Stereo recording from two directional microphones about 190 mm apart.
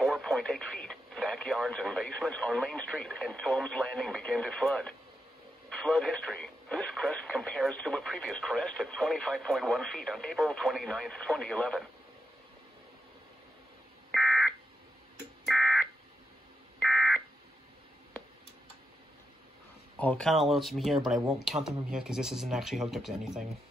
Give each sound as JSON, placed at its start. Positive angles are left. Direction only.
{"t": 0.0, "sound": "speech", "side_deg": 0}
{"t": 14.1, "sound": "a sound", "side_deg": 0}
{"t": 15.4, "sound": "fire alarm", "side_deg": 0}
{"t": 16.8, "sound": "smoke detector", "side_deg": 0}
{"t": 20.0, "sound": "speech", "side_deg": 5}